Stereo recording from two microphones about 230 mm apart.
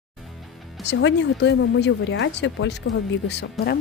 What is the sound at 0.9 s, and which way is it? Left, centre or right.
Speech, left.